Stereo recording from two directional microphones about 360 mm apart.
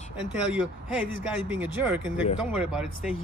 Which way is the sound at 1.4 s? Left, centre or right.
Centre.